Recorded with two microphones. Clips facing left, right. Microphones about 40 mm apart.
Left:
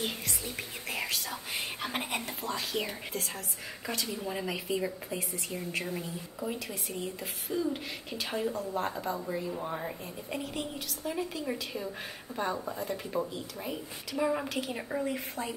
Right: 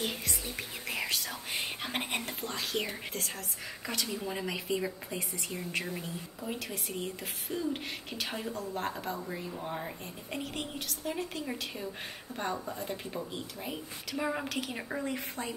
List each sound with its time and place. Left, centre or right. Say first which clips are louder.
0.0 s speech: even; centre